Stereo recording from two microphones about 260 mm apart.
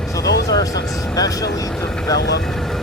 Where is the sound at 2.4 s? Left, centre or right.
Centre.